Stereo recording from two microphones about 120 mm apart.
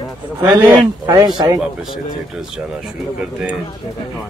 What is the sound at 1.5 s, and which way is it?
Speech, 5° right (ahead or behind).